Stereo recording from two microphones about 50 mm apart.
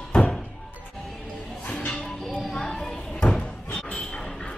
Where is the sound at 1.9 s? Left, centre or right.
Centre.